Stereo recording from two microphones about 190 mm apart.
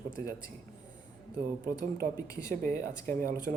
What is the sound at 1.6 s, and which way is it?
Speech, 50° right (ahead or behind).